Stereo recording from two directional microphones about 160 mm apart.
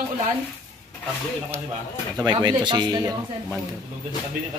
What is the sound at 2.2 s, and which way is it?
Speech, 25° right (ahead or behind).